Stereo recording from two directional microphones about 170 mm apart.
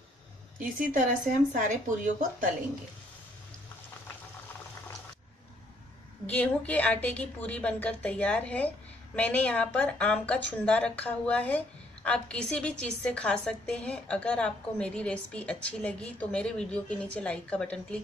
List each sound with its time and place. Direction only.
0.6 s a woman's voice: 50° right (ahead or behind)
6.2 s a woman's voice: 10° left (ahead or behind)